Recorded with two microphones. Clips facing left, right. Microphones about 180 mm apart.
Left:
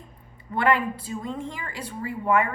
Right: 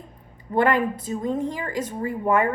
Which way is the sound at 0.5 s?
45° right (ahead or behind).